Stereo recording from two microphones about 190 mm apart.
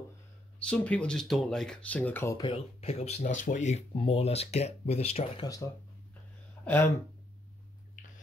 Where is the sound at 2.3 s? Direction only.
25° left (ahead or behind).